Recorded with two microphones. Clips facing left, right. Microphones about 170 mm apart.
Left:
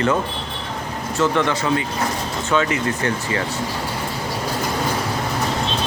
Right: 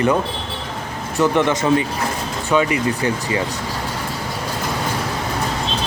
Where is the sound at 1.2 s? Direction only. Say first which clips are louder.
Right 3 dB; 15° right (ahead or behind).